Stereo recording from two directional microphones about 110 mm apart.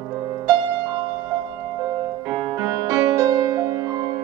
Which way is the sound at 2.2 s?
30° right (ahead or behind).